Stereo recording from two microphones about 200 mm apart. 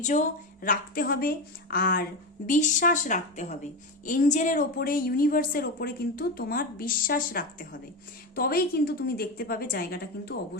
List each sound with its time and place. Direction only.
0.0 s a woman's voice: 40° left (ahead or behind)